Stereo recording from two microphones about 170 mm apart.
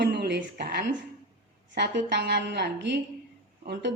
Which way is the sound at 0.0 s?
80° right.